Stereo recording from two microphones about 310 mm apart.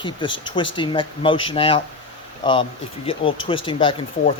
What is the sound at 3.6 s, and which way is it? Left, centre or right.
Speech, centre.